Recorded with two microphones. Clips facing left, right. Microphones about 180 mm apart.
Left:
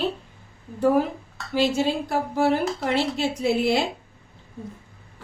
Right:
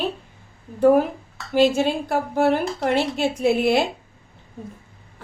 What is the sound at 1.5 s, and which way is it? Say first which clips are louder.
A woman's voice: right 4 dB; 55° right (ahead or behind).